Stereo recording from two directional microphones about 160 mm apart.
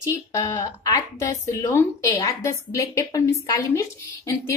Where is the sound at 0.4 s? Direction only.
20° left (ahead or behind).